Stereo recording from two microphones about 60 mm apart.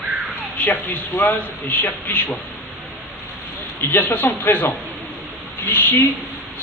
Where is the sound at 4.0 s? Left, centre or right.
Left.